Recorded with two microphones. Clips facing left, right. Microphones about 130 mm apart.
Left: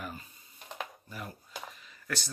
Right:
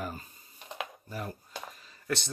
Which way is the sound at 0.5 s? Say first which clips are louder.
Right 2 dB; 5° right (ahead or behind).